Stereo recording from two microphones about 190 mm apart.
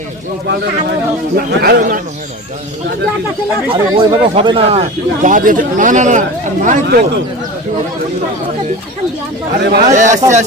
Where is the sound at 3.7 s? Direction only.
25° right (ahead or behind).